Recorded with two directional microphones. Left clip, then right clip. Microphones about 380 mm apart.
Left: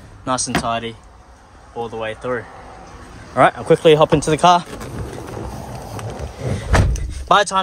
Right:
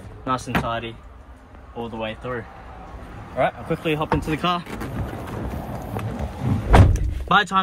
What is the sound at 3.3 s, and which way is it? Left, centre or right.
Speech, centre.